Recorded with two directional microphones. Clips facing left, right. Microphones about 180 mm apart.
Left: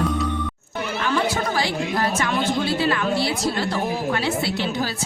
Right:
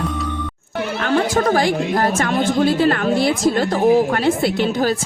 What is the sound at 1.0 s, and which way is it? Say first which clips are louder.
Speech: right 6 dB; 55° right (ahead or behind).